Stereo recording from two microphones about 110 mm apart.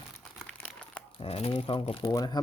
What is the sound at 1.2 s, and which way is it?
Speech, 60° left (ahead or behind).